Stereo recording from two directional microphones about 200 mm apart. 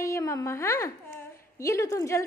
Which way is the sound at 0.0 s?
15° left (ahead or behind).